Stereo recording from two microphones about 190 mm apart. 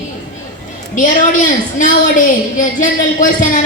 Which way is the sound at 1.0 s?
40° left (ahead or behind).